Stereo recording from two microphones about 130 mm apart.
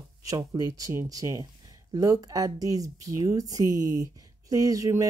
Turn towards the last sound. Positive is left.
turn(degrees=-25)  # may be behind; listen again after turning